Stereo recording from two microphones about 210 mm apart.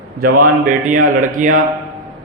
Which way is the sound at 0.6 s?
40° right (ahead or behind).